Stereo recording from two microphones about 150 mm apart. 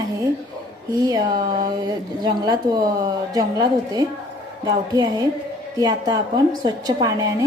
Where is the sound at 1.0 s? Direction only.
25° right (ahead or behind).